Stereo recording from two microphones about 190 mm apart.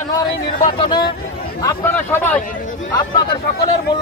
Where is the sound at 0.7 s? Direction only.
25° left (ahead or behind).